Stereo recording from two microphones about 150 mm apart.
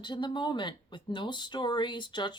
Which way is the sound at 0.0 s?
30° left (ahead or behind).